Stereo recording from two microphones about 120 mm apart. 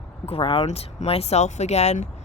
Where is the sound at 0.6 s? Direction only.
65° left (ahead or behind).